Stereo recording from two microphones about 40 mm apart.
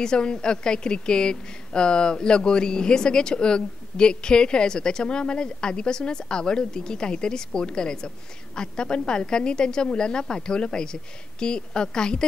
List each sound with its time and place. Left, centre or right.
0.0 s a woman's voice: left